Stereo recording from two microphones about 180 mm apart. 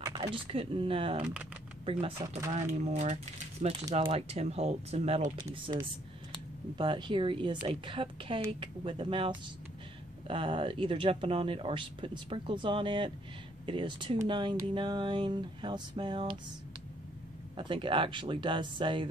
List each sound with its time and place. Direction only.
0.0 s speech: 30° right (ahead or behind)
1.2 s speech: 10° right (ahead or behind)
1.9 s speech: 30° right (ahead or behind)
6.8 s speech: 25° right (ahead or behind)
17.6 s speech: 30° right (ahead or behind)